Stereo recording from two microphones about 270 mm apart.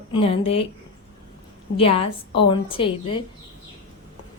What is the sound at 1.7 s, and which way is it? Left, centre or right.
A woman's voice, left.